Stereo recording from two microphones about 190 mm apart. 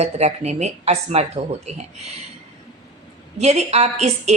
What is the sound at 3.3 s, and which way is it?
Speech, 35° right (ahead or behind).